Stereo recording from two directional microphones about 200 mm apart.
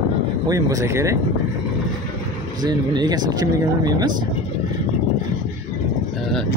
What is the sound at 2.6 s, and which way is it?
Speech, 20° right (ahead or behind).